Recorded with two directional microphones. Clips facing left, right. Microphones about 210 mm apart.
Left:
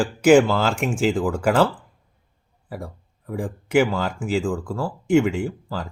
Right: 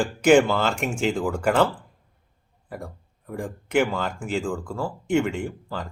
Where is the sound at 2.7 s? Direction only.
5° left (ahead or behind).